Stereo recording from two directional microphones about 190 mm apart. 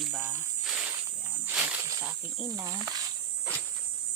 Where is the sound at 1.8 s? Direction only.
15° right (ahead or behind).